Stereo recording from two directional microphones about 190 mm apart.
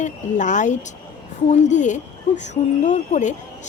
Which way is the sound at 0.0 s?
40° left (ahead or behind).